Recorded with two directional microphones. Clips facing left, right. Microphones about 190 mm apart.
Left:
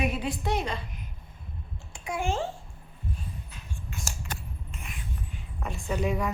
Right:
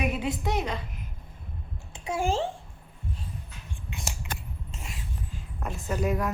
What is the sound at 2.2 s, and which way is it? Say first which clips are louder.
Speech: right 3 dB; 35° right (ahead or behind).